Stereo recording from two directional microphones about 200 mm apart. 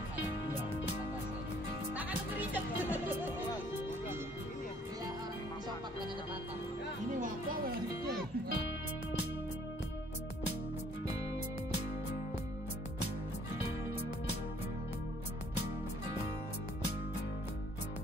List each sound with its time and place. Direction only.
2.0 s music: 10° right (ahead or behind)
7.2 s music: 40° right (ahead or behind)